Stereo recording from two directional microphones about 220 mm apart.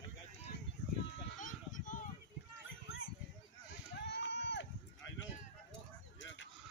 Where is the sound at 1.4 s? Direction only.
35° left (ahead or behind).